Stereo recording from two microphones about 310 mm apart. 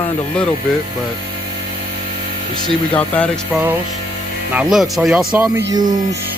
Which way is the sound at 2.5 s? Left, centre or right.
Centre.